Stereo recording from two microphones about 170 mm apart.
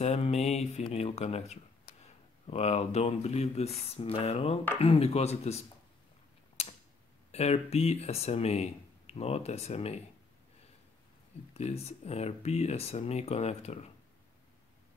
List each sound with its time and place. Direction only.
0.0 s speech: 40° left (ahead or behind)
7.2 s speech: 40° left (ahead or behind)
11.5 s speech: 40° left (ahead or behind)